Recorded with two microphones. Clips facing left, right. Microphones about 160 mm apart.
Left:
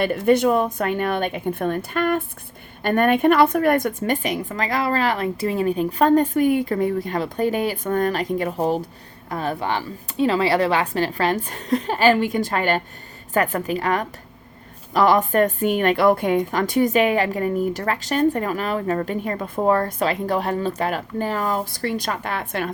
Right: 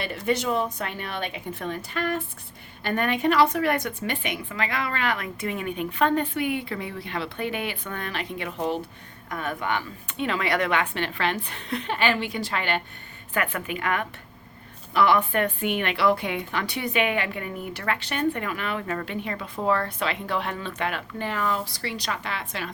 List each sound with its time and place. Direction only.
0.0 s a woman's voice: 50° left (ahead or behind)